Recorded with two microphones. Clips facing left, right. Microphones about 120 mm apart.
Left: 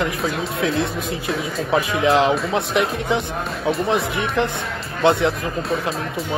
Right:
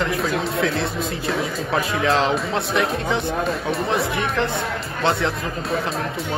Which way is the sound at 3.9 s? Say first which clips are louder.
Left 1 dB; 20° left (ahead or behind).